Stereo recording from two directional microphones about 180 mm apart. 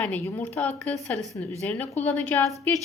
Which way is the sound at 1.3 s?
15° left (ahead or behind).